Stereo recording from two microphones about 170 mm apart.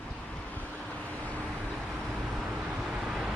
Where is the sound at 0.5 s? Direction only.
10° left (ahead or behind).